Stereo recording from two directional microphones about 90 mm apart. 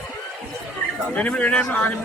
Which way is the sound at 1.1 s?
15° left (ahead or behind).